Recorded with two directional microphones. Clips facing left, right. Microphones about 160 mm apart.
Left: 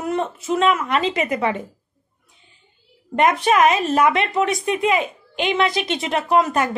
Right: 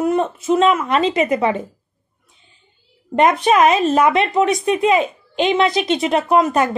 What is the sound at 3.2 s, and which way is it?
Speech, 25° right (ahead or behind).